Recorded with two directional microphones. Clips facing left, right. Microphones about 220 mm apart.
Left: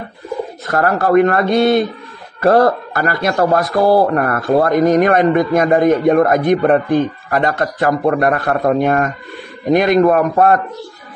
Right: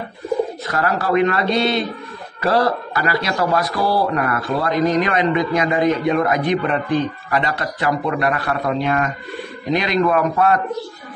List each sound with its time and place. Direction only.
0.7 s a man's voice: 50° left (ahead or behind)